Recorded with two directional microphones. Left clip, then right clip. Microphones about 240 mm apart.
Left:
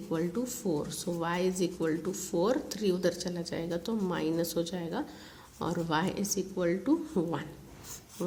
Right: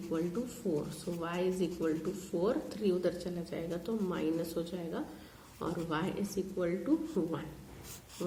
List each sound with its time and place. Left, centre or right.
0.1 s a woman's voice: left